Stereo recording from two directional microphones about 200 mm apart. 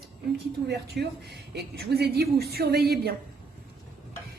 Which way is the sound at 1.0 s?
55° right (ahead or behind).